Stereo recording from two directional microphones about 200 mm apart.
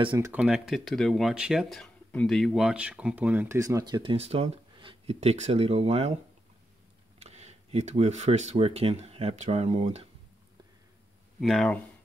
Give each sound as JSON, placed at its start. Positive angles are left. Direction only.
{"t": 0.0, "sound": "speech", "side_deg": -25}
{"t": 0.3, "sound": "speech", "side_deg": -5}
{"t": 7.2, "sound": "speech", "side_deg": -35}
{"t": 11.3, "sound": "speech", "side_deg": 0}